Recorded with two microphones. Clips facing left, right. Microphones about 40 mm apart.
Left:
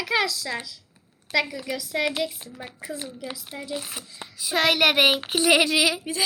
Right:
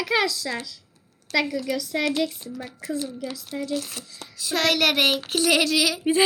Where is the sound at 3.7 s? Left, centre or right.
Centre.